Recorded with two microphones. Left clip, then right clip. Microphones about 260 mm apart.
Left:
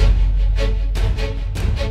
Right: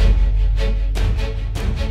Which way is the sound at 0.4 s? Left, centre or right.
Centre.